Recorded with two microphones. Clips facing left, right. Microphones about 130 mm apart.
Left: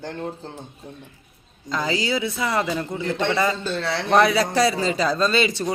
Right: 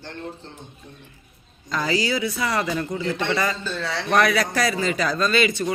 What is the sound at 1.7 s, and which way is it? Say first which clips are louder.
A man's voice: even; 20° left (ahead or behind).